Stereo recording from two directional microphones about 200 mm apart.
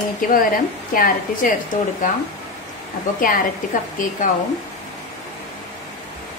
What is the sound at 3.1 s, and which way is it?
Speech, 45° left (ahead or behind).